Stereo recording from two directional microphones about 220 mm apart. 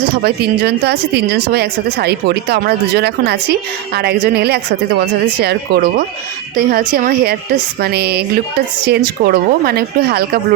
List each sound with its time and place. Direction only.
0.2 s speech: 45° right (ahead or behind)